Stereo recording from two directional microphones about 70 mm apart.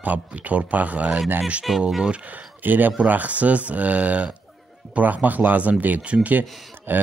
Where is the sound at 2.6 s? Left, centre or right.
Right.